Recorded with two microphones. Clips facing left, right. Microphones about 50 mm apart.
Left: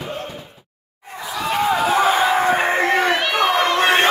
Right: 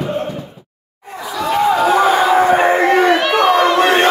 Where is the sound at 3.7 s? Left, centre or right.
Centre.